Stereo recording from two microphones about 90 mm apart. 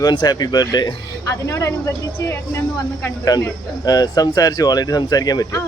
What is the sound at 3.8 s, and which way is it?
Speech, 45° left (ahead or behind).